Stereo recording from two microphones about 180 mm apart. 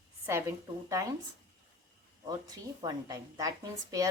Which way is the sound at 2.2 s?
20° right (ahead or behind).